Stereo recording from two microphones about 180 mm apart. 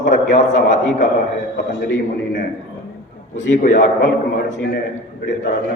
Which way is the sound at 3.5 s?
45° left (ahead or behind).